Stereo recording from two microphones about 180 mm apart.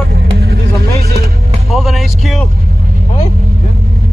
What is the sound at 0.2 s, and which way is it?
Vehicle, 65° right (ahead or behind).